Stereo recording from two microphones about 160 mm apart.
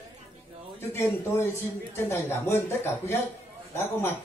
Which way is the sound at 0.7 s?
15° left (ahead or behind).